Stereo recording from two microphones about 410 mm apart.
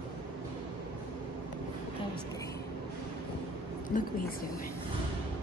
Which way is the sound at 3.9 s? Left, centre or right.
Centre.